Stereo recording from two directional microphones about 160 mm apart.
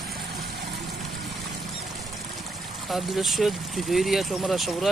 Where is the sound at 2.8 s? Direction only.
Centre (ahead or behind).